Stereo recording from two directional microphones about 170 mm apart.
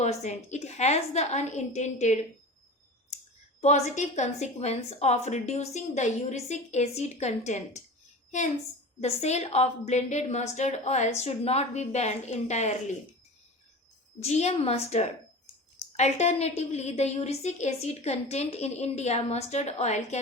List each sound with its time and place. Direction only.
0.0 s a woman's voice: 40° left (ahead or behind)
3.6 s a woman's voice: 40° left (ahead or behind)
9.0 s a woman's voice: 40° left (ahead or behind)
14.2 s a woman's voice: 40° left (ahead or behind)